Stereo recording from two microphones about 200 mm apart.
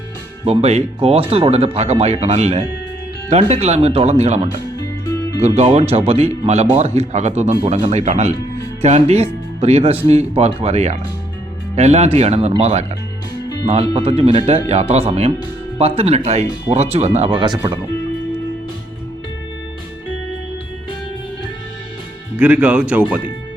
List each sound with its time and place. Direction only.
0.4 s speech: 30° right (ahead or behind)
13.9 s speech: 30° right (ahead or behind)
22.4 s speech: 5° right (ahead or behind)